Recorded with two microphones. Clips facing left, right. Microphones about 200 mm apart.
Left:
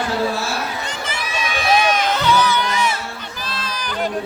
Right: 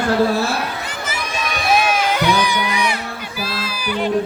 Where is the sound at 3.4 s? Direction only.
10° right (ahead or behind).